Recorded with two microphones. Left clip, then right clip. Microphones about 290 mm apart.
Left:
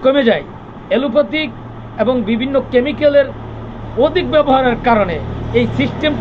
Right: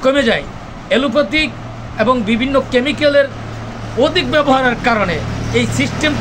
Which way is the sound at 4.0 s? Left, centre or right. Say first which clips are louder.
Left 1 dB; centre.